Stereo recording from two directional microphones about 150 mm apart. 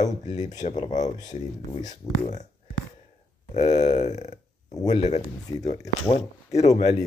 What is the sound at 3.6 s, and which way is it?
Speech, 50° left (ahead or behind).